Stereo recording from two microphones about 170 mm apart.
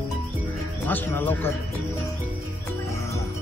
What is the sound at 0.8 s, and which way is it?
Speech, 10° left (ahead or behind).